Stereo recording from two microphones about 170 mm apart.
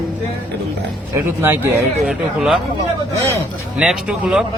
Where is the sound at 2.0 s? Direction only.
5° right (ahead or behind).